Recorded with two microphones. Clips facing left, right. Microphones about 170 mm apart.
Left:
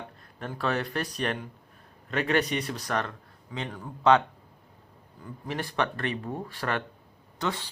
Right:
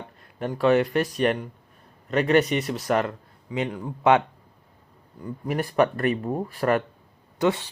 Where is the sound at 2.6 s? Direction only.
20° right (ahead or behind).